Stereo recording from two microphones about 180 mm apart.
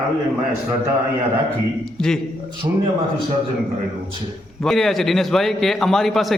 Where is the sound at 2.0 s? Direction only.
5° left (ahead or behind).